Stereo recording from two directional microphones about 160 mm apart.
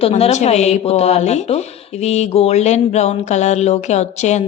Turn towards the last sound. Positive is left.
turn(degrees=45)  # may be behind; listen again after turning